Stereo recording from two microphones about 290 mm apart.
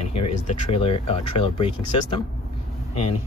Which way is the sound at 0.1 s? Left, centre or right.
Left.